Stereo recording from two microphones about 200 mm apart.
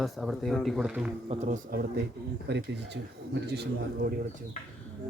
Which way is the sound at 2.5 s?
60° right (ahead or behind).